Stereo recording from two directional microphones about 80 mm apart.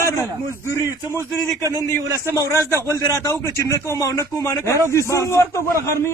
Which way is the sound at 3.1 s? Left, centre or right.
Left.